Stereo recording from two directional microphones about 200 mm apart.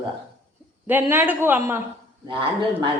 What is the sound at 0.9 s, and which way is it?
Speech, 10° right (ahead or behind).